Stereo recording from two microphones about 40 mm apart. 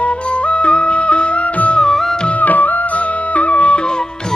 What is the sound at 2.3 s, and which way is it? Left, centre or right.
Music, left.